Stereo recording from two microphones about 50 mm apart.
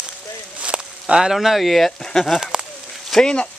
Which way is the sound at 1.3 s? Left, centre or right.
Centre.